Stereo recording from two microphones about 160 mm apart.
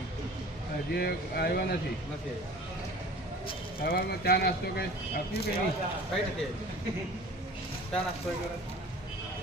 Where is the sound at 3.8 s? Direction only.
70° left (ahead or behind).